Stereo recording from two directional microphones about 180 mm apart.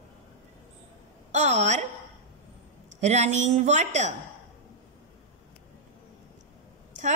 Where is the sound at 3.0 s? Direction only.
40° right (ahead or behind).